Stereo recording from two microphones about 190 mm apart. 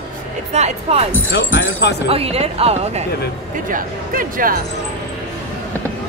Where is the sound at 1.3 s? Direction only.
70° left (ahead or behind).